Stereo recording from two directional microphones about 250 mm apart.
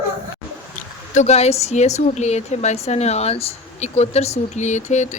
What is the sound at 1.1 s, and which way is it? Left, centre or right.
A woman's voice, left.